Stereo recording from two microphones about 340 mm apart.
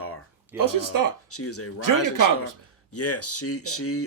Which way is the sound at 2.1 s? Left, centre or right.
Right.